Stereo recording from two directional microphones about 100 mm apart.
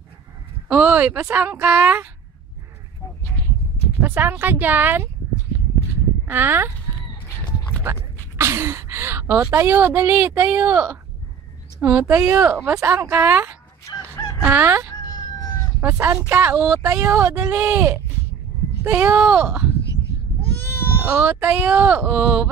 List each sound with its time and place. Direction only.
0.7 s speech: 15° right (ahead or behind)
4.0 s speech: 20° right (ahead or behind)
6.2 s speech: 20° right (ahead or behind)
7.4 s a sound: 15° left (ahead or behind)
7.8 s speech: 25° right (ahead or behind)
15.0 s emergency vehicle: 40° left (ahead or behind)
15.8 s speech: 25° right (ahead or behind)
21.0 s speech: 15° right (ahead or behind)